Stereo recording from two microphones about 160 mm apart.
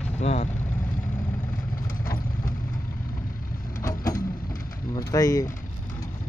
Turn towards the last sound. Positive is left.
turn(degrees=20)  # may be behind; listen again after turning